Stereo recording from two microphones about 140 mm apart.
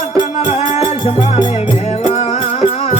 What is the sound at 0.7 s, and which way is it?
Music, 40° left (ahead or behind).